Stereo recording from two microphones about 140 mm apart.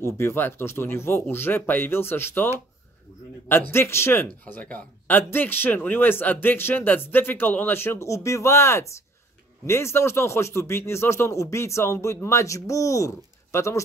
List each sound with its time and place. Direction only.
0.0 s speech: 20° left (ahead or behind)